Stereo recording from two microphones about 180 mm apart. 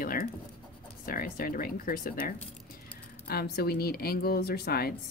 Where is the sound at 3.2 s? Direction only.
60° left (ahead or behind).